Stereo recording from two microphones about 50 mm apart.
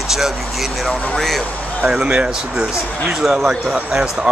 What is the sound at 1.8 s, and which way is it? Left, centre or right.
Speech, centre.